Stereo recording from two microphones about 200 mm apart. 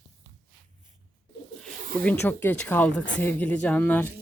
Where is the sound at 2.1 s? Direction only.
10° left (ahead or behind).